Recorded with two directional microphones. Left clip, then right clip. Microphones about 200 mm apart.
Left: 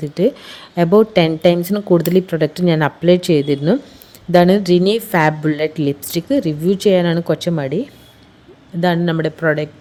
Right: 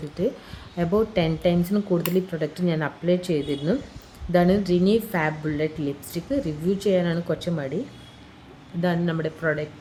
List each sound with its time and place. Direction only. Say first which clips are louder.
0.1 s speech: left 10 dB; 45° left (ahead or behind)
8.8 s speech: left 9 dB; 40° left (ahead or behind)